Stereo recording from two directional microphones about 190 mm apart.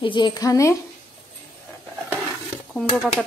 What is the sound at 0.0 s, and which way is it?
Speech, 25° left (ahead or behind).